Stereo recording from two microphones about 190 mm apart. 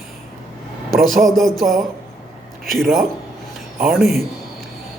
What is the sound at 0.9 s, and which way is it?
Speech, 50° right (ahead or behind).